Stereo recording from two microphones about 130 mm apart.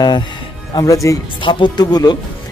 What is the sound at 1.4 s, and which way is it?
Speech, 35° left (ahead or behind).